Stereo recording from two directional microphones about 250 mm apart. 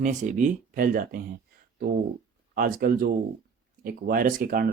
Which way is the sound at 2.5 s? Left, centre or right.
Right.